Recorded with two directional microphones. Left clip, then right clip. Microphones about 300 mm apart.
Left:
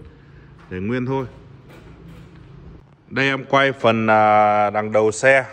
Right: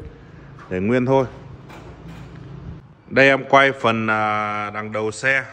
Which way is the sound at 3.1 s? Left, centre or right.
Centre.